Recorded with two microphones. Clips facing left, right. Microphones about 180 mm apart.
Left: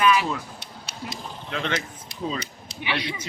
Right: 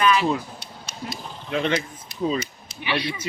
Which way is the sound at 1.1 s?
15° right (ahead or behind).